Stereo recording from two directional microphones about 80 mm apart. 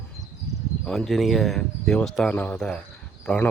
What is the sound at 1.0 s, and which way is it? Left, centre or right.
Speech, centre.